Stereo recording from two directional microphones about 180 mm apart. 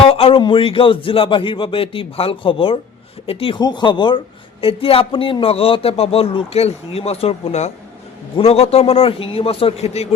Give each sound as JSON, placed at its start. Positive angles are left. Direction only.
{"t": 0.0, "sound": "a man's voice", "side_deg": 30}